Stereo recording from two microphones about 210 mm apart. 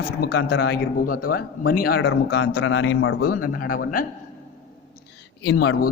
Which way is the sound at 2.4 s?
70° left (ahead or behind).